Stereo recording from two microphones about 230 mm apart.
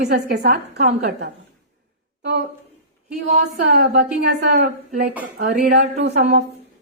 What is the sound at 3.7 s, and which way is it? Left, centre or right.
A woman's voice, right.